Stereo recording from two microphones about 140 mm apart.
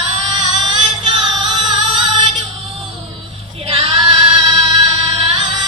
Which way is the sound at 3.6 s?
40° right (ahead or behind).